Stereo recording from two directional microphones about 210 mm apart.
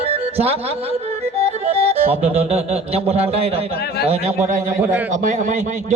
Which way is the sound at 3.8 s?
50° left (ahead or behind).